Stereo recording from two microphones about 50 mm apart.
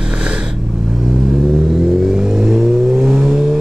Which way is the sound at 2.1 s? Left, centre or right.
Centre.